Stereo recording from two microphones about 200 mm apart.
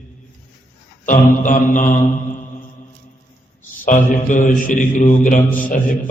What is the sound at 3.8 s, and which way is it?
A man's voice, 40° left (ahead or behind).